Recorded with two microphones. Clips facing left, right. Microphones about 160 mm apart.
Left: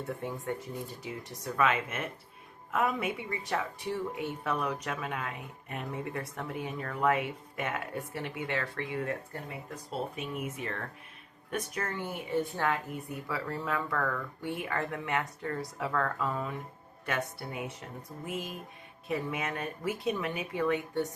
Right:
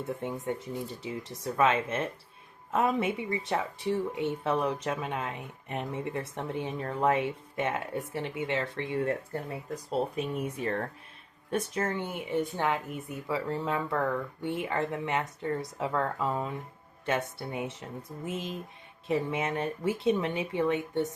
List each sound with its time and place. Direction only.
0.2 s speech: 20° right (ahead or behind)